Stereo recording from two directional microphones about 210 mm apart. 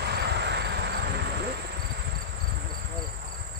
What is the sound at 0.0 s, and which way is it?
Insect, 50° right (ahead or behind).